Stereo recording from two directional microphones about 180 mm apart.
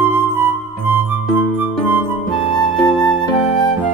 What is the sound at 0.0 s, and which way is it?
Music, 10° right (ahead or behind).